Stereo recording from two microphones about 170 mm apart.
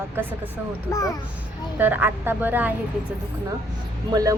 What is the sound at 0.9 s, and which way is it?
Speech, 20° left (ahead or behind).